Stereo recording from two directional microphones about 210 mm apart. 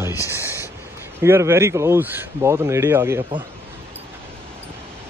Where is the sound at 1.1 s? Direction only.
10° right (ahead or behind).